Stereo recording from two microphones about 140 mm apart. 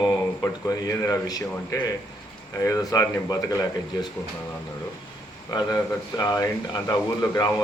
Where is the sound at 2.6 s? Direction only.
25° left (ahead or behind).